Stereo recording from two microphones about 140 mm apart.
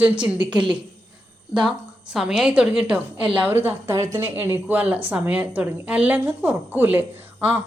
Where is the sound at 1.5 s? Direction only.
5° right (ahead or behind).